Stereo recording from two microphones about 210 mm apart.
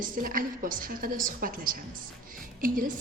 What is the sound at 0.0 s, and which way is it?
A woman's voice, 40° right (ahead or behind).